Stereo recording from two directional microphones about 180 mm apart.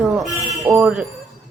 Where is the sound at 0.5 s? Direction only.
15° right (ahead or behind).